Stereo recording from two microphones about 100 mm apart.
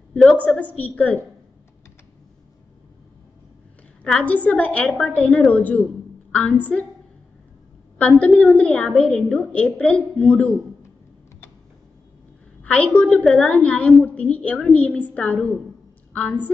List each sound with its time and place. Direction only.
0.2 s a woman's voice: 10° left (ahead or behind)
4.0 s a woman's voice: 10° left (ahead or behind)
8.0 s a woman's voice: 15° left (ahead or behind)
12.6 s a woman's voice: 15° left (ahead or behind)